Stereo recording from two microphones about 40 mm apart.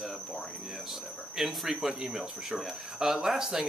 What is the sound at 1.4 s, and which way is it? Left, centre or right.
Speech, centre.